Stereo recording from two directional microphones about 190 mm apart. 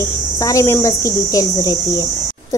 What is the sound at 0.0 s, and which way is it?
A woman's voice, 15° left (ahead or behind).